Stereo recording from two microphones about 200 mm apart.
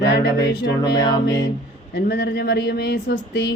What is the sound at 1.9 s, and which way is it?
Speech, 55° left (ahead or behind).